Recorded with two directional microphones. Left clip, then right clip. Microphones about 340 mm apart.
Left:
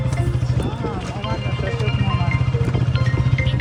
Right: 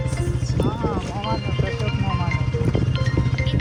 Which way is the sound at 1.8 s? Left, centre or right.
Right.